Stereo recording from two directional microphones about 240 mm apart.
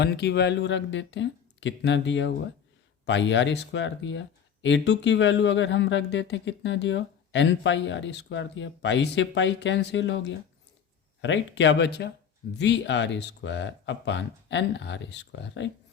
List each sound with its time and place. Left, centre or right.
0.0 s speech: left